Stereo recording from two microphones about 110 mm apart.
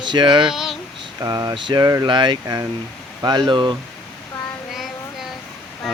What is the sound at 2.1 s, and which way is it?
Speech, 45° right (ahead or behind).